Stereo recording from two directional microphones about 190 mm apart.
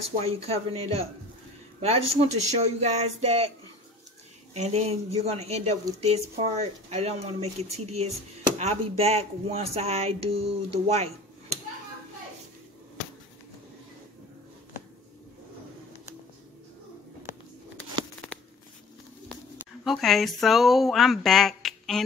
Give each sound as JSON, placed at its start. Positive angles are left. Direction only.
{"t": 0.2, "sound": "speech", "side_deg": -30}
{"t": 4.6, "sound": "speech", "side_deg": -35}
{"t": 19.8, "sound": "speech", "side_deg": 0}